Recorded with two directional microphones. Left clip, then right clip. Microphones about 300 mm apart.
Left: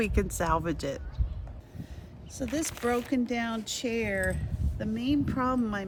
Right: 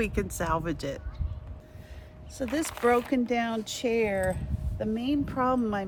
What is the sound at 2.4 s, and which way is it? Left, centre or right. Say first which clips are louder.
A woman's voice: right 3 dB; centre.